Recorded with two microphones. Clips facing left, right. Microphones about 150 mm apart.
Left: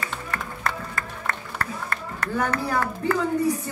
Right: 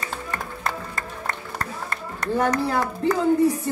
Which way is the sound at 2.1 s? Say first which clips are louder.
Right 4 dB; 15° right (ahead or behind).